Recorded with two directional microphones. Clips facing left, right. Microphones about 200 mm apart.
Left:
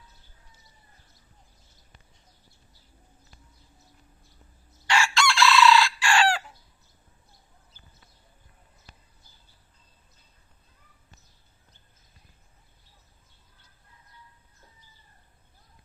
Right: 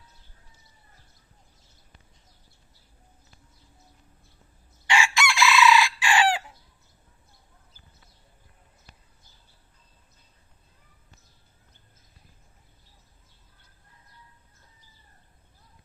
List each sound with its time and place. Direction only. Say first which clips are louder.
4.9 s chicken: even; 15° right (ahead or behind)